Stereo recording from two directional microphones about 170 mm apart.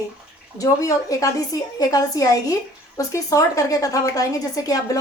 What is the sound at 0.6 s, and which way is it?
Speech, 20° left (ahead or behind).